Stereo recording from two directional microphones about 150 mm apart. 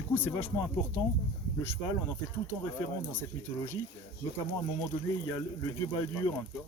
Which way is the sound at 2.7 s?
15° left (ahead or behind).